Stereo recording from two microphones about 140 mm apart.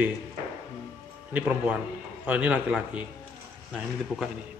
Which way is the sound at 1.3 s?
10° right (ahead or behind).